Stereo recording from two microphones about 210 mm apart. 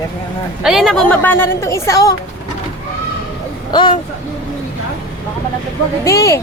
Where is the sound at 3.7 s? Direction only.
20° left (ahead or behind).